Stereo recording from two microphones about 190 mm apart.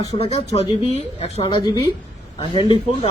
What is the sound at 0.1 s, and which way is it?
Speech, 30° left (ahead or behind).